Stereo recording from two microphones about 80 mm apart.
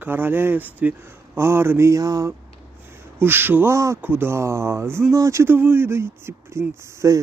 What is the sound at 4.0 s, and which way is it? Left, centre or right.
Speech, right.